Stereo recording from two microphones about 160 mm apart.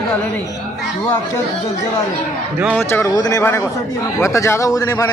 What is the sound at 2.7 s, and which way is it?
A man's voice, 15° left (ahead or behind).